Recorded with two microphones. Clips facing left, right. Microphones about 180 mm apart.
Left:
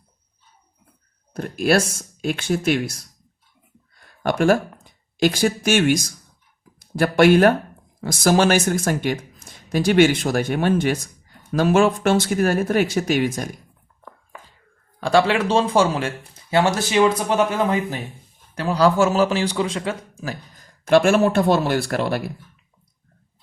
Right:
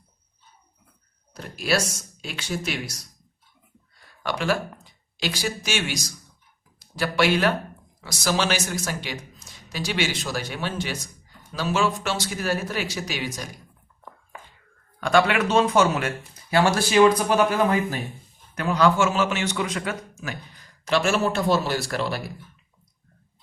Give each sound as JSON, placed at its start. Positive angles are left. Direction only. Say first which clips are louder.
{"t": 1.3, "sound": "speech", "louder": "left 7 dB", "side_deg": 50}
{"t": 15.0, "sound": "speech", "louder": "left 3 dB", "side_deg": 30}
{"t": 18.5, "sound": "a man's voice", "louder": "left 3 dB", "side_deg": 30}